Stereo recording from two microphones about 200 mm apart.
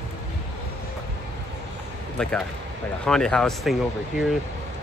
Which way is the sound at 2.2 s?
5° left (ahead or behind).